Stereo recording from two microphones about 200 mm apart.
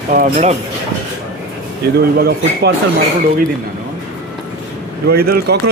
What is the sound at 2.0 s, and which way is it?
Speech, 50° right (ahead or behind).